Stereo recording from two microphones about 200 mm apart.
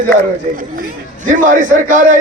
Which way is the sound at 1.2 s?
40° right (ahead or behind).